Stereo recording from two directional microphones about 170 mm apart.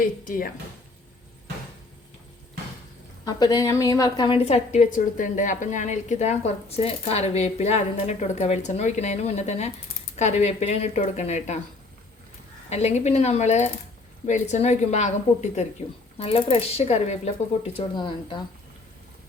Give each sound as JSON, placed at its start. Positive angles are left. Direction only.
{"t": 0.0, "sound": "speech", "side_deg": 55}
{"t": 3.2, "sound": "a woman's voice", "side_deg": 25}
{"t": 12.7, "sound": "a woman's voice", "side_deg": 40}
{"t": 17.7, "sound": "speech", "side_deg": 30}